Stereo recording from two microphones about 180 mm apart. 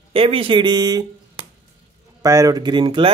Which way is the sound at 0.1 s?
30° right (ahead or behind).